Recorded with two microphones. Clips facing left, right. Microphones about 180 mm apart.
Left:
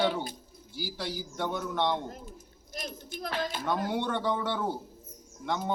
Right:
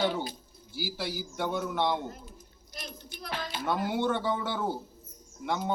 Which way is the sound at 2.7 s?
45° left (ahead or behind).